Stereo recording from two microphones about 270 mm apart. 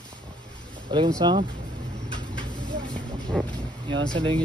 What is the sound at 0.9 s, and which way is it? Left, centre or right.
Speech, centre.